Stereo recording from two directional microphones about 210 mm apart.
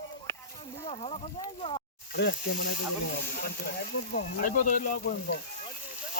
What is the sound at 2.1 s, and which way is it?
Speech, 50° left (ahead or behind).